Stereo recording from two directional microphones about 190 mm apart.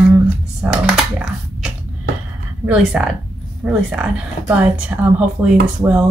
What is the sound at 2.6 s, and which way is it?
Speech, 5° right (ahead or behind).